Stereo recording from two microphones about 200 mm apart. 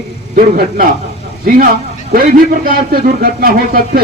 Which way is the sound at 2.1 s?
45° right (ahead or behind).